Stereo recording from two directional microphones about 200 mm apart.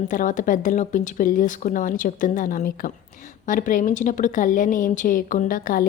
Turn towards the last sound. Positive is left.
turn(degrees=45)  # may be behind; listen again after turning